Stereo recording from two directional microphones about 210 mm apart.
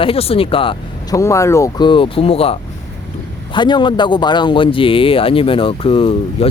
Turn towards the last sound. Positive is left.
turn(degrees=25)  # may be behind; listen again after turning